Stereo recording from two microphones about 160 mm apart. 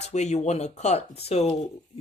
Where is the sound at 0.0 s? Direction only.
45° left (ahead or behind).